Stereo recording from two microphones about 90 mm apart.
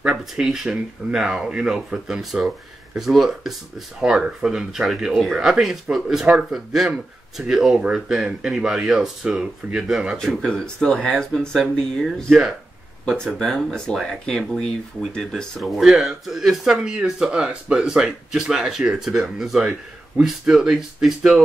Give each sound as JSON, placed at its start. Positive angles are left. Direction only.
{"t": 0.0, "sound": "speech", "side_deg": -10}
{"t": 13.0, "sound": "speech", "side_deg": 10}